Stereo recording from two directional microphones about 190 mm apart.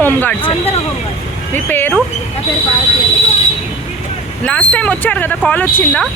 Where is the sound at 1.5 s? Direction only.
10° left (ahead or behind).